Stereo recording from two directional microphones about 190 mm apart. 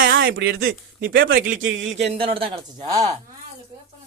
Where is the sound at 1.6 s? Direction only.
85° right.